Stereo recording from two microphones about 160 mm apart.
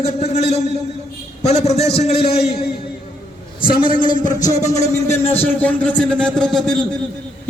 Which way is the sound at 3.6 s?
65° left (ahead or behind).